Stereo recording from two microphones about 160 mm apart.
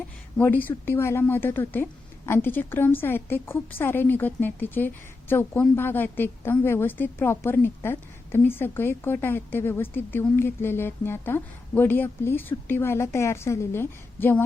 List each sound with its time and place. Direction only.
0.3 s a woman's voice: 10° left (ahead or behind)